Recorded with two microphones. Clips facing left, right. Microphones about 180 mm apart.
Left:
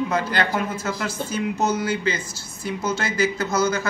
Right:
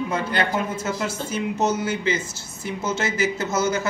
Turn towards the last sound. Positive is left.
turn(degrees=-25)  # may be behind; listen again after turning